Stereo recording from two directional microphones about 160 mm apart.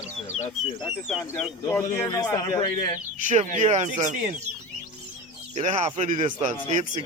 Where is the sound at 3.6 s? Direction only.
45° right (ahead or behind).